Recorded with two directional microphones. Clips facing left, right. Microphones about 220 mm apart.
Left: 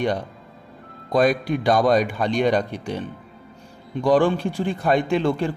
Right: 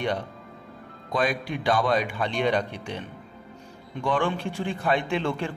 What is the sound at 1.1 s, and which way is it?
A man's voice, 40° left (ahead or behind).